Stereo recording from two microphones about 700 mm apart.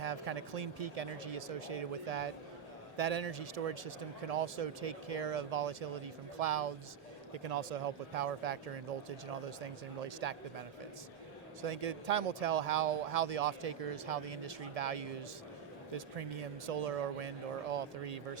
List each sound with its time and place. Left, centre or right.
0.0 s speech: right
11.6 s speech: right